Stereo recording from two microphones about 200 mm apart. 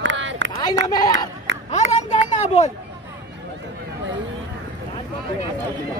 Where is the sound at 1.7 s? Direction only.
35° left (ahead or behind).